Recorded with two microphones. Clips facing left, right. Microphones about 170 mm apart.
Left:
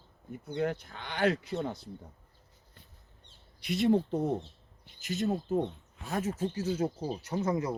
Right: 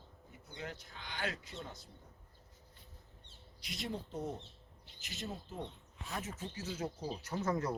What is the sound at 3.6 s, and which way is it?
Speech, 60° left (ahead or behind).